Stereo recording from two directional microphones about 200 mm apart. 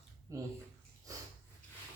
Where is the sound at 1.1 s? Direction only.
15° right (ahead or behind).